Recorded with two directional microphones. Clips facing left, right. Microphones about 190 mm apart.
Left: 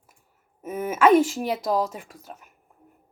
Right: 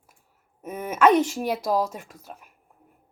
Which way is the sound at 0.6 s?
5° left (ahead or behind).